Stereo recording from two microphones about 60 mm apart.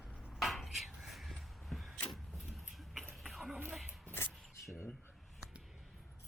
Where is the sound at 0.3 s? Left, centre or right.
Centre.